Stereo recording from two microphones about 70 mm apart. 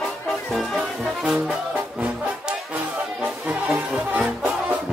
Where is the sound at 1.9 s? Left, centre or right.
Right.